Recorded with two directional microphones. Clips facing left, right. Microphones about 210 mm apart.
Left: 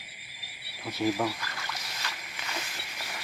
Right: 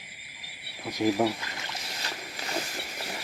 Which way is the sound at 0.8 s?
15° right (ahead or behind).